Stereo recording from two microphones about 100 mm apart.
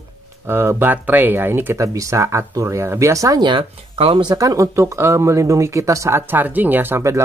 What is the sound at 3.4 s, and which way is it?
Speech, 55° right (ahead or behind).